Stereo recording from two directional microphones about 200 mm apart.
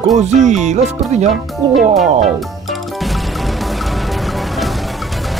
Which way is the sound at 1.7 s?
Centre (ahead or behind).